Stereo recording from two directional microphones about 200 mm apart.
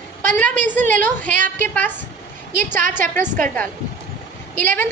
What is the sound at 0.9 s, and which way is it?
A woman's voice, 10° left (ahead or behind).